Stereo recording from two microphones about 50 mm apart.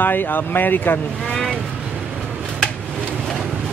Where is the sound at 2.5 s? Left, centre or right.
Centre.